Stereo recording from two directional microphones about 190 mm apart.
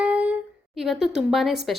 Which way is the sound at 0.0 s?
5° right (ahead or behind).